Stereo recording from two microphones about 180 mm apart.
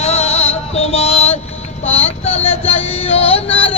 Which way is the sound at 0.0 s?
35° left (ahead or behind).